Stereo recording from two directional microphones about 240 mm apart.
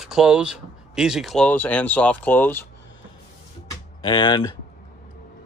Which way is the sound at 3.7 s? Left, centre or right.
Centre.